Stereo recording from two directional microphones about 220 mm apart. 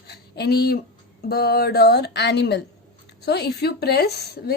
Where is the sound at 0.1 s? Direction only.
50° left (ahead or behind).